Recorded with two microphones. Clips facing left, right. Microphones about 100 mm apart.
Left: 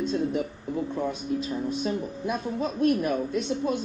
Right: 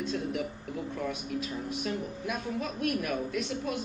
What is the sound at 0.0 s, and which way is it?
Speech, 30° left (ahead or behind).